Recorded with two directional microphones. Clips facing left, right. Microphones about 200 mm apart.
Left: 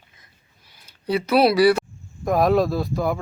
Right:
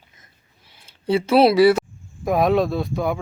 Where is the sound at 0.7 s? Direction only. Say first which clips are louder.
Right 3 dB; 25° right (ahead or behind).